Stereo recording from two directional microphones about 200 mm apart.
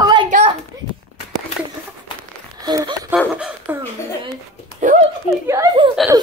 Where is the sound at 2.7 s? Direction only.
20° right (ahead or behind).